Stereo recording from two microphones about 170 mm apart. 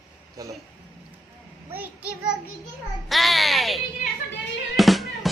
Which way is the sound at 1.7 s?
10° right (ahead or behind).